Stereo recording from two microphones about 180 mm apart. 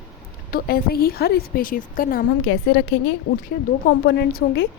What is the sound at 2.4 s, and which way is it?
A woman's voice, 90° left.